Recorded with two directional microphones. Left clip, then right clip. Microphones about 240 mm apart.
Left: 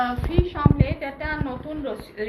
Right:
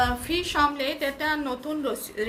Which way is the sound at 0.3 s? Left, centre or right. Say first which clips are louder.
Right 1 dB; right.